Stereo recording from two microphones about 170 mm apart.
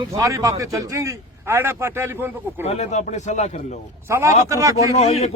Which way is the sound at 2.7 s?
40° left (ahead or behind).